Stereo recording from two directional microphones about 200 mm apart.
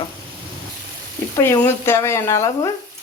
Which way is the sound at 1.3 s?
10° left (ahead or behind).